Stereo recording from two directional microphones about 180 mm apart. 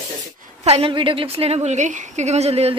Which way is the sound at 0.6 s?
35° right (ahead or behind).